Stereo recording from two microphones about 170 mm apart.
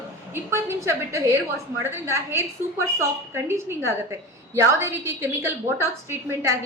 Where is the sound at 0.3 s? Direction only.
15° right (ahead or behind).